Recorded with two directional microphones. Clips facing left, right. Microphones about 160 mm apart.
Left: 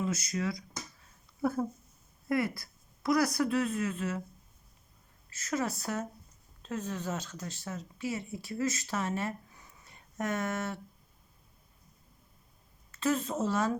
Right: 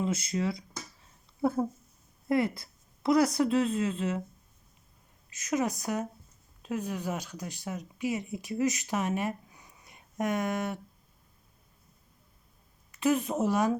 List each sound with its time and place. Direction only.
0.0 s a woman's voice: 25° right (ahead or behind)
5.3 s speech: 15° right (ahead or behind)
12.9 s speech: 15° right (ahead or behind)